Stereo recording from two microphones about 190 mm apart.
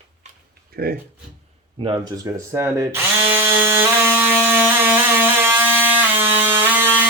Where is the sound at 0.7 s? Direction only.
55° right (ahead or behind).